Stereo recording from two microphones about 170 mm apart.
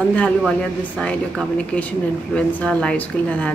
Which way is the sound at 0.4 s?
Centre (ahead or behind).